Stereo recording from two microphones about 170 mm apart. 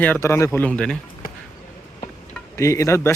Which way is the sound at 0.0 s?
15° left (ahead or behind).